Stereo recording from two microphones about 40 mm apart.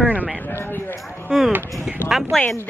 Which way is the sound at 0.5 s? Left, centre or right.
Left.